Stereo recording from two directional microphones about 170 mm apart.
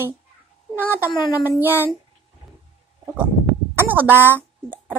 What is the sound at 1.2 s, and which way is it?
Speech, 20° left (ahead or behind).